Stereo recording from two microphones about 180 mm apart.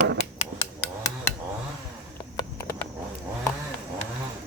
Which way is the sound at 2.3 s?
20° left (ahead or behind).